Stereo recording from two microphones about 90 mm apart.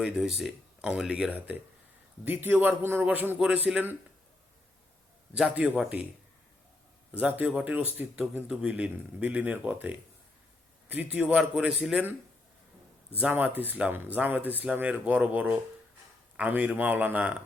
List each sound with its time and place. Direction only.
0.0 s speech: 5° right (ahead or behind)
1.3 s a man's voice: 20° right (ahead or behind)
5.4 s speech: 10° right (ahead or behind)
7.1 s speech: 15° right (ahead or behind)
13.1 s speech: 20° right (ahead or behind)